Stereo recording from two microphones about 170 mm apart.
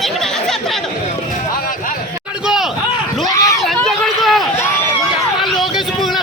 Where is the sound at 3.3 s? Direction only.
20° left (ahead or behind).